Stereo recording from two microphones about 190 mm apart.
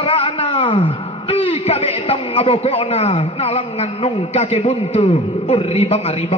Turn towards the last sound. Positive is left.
turn(degrees=30)  # may be behind; listen again after turning